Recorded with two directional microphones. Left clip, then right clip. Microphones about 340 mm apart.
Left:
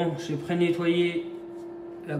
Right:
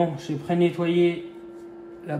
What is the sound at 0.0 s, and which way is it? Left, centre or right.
A man's voice, centre.